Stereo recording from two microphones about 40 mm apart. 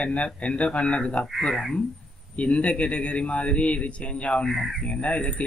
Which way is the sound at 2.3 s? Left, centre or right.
Left.